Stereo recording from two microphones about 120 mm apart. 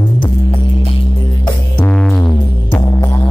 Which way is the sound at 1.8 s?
10° left (ahead or behind).